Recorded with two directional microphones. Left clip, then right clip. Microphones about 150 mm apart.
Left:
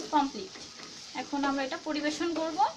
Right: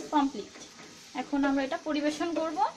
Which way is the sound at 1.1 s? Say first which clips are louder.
Right 2 dB; 55° right (ahead or behind).